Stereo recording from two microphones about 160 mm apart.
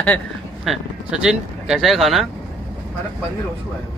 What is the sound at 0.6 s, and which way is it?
Speech, centre (ahead or behind).